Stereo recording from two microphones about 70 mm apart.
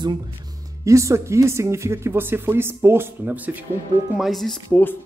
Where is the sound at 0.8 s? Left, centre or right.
Right.